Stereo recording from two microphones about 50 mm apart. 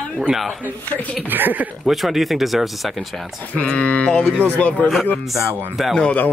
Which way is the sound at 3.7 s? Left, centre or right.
Left.